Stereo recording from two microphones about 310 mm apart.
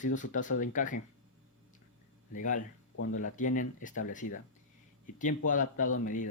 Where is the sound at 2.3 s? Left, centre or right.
Left.